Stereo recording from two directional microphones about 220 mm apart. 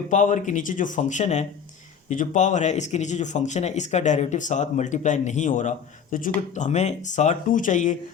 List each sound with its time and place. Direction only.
0.1 s speech: 35° left (ahead or behind)